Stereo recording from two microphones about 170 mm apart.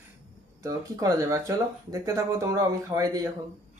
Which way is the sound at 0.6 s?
20° right (ahead or behind).